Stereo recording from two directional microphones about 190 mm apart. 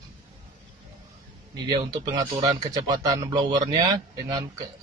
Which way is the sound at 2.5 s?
20° right (ahead or behind).